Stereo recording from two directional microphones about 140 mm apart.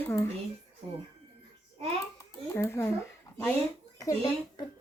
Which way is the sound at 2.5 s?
20° left (ahead or behind).